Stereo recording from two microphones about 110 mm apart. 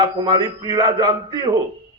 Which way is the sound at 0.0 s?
40° right (ahead or behind).